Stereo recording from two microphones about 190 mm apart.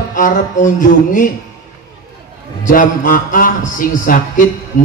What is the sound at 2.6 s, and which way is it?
Speech, 45° left (ahead or behind).